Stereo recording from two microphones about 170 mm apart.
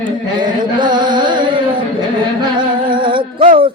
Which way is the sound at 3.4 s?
30° right (ahead or behind).